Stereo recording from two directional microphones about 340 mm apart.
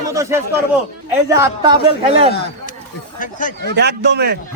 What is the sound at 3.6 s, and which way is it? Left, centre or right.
Speech, right.